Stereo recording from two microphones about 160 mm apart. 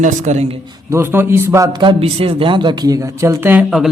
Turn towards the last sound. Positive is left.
turn(degrees=-15)  # may be behind; listen again after turning